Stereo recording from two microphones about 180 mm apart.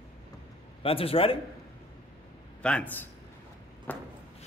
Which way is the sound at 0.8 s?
30° left (ahead or behind).